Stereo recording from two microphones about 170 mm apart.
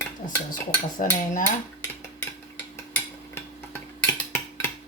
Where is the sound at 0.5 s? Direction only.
50° left (ahead or behind).